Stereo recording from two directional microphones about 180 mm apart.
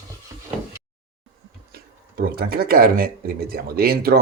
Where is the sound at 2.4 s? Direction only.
60° right (ahead or behind).